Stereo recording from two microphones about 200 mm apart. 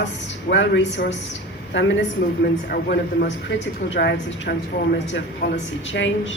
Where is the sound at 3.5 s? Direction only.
65° left (ahead or behind).